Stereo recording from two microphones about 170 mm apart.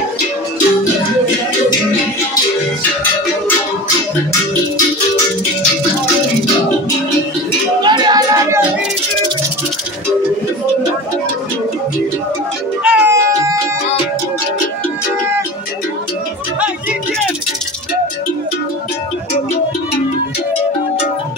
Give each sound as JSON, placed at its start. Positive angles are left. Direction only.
{"t": 7.8, "sound": "music", "side_deg": -25}
{"t": 12.8, "sound": "cat", "side_deg": -15}